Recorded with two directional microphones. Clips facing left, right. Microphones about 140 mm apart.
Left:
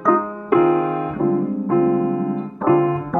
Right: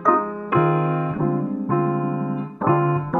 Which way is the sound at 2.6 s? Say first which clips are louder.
Left 4 dB; centre (ahead or behind).